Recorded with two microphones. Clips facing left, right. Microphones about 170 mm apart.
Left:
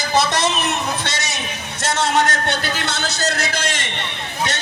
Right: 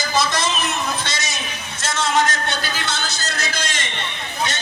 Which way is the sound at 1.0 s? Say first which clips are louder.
Left 2 dB; 65° left (ahead or behind).